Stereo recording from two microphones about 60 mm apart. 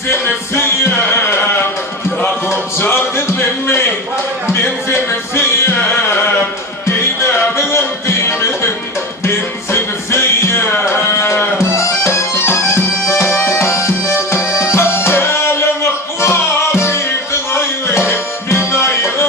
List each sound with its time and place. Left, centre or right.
2.5 s music: left
4.9 s music: left
7.5 s music: left
11.1 s music: left
18.1 s music: left